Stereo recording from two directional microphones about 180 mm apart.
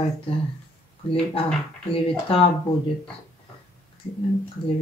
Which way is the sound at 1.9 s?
30° left (ahead or behind).